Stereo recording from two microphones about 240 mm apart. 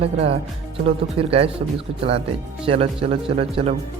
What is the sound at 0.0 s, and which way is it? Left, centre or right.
Speech, right.